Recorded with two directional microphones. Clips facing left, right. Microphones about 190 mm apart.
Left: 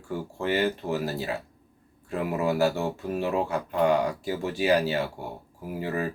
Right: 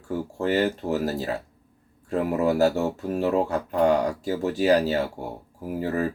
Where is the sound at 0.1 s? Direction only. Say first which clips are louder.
Right 3 dB; 40° right (ahead or behind).